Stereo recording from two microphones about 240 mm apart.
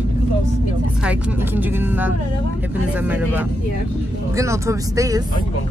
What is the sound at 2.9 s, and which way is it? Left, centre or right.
Vehicle, centre.